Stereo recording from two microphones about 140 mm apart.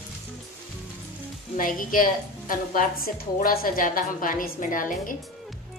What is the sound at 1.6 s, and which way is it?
A woman's voice, 75° left (ahead or behind).